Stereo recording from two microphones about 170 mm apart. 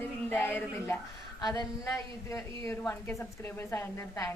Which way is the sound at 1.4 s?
25° left (ahead or behind).